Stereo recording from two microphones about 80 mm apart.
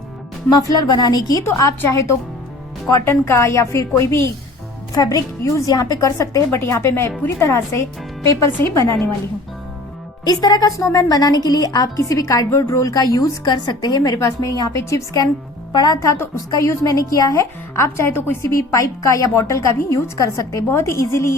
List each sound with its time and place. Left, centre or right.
0.5 s speech: left
1.5 s speech: left
2.9 s speech: left
4.9 s a woman's voice: left
5.4 s speech: left
10.2 s a woman's voice: left
13.5 s a woman's voice: left
15.7 s speech: left
16.5 s a woman's voice: left
18.5 s a woman's voice: left